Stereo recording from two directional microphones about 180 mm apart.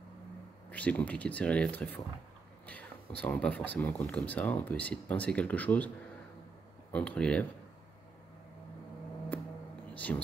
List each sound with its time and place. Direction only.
0.7 s speech: 10° left (ahead or behind)
6.9 s speech: 5° left (ahead or behind)
9.9 s a sound: 10° left (ahead or behind)